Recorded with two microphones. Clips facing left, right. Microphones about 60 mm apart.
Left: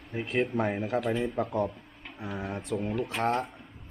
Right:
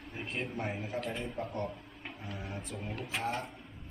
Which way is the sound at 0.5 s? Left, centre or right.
Left.